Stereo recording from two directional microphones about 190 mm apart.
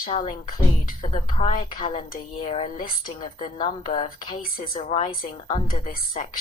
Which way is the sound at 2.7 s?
45° left (ahead or behind).